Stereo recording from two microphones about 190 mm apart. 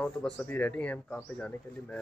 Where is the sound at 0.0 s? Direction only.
5° left (ahead or behind).